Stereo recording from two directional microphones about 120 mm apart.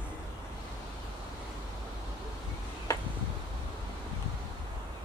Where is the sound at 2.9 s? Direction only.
25° left (ahead or behind).